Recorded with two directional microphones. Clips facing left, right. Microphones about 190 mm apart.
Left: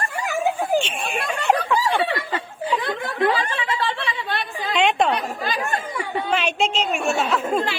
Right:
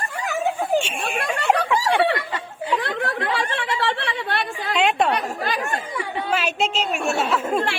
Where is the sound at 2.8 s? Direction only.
65° right (ahead or behind).